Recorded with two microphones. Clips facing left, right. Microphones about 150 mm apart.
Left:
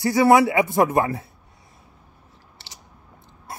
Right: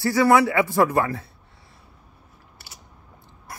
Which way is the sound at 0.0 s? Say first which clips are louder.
Left 2 dB; 20° left (ahead or behind).